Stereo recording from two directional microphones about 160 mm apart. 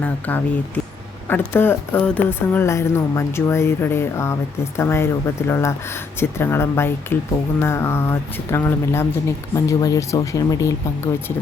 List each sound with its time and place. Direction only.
0.0 s speech: 10° left (ahead or behind)